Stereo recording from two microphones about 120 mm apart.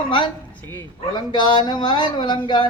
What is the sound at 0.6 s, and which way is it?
Speech, 15° left (ahead or behind).